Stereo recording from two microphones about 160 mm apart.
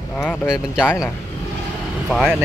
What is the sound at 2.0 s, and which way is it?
Speech, 5° left (ahead or behind).